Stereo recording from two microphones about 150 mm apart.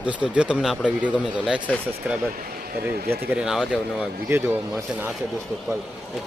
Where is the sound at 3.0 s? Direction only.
5° right (ahead or behind).